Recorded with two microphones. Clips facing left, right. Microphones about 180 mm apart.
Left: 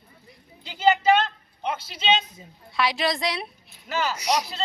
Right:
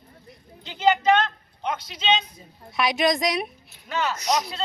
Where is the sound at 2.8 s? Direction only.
20° right (ahead or behind).